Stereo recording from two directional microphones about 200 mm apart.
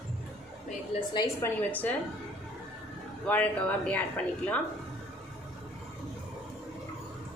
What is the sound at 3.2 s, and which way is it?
Speech, 5° left (ahead or behind).